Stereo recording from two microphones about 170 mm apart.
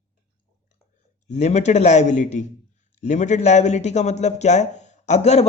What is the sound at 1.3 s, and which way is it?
Speech, 40° left (ahead or behind).